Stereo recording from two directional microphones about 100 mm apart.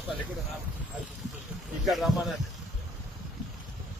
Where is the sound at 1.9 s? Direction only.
Centre (ahead or behind).